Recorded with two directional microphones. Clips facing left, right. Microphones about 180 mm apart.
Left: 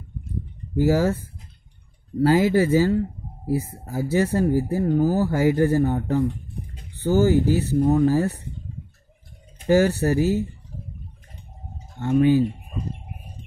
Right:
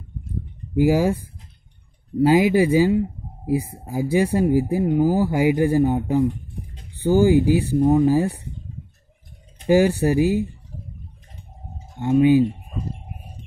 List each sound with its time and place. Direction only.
0.7 s speech: 15° right (ahead or behind)
9.7 s speech: 15° right (ahead or behind)
12.0 s speech: 15° right (ahead or behind)